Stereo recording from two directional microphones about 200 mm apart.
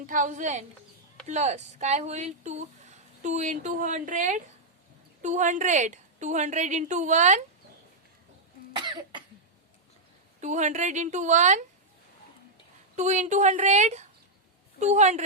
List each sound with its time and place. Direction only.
0.0 s speech: 40° right (ahead or behind)
10.4 s speech: 35° right (ahead or behind)
13.0 s speech: 35° right (ahead or behind)